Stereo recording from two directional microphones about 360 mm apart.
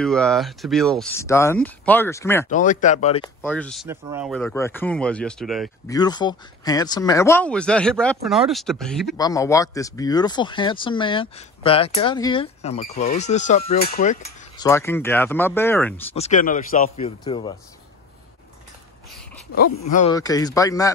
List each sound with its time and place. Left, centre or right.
0.0 s speech: centre
2.5 s speech: left
3.4 s speech: centre
5.9 s speech: centre
16.2 s speech: left
19.9 s speech: centre